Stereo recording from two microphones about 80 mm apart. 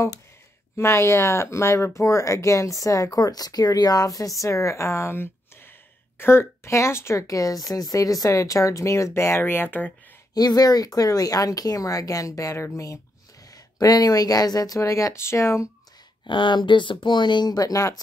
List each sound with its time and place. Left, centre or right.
0.7 s speech: left
10.3 s speech: left
13.7 s speech: left
16.3 s speech: left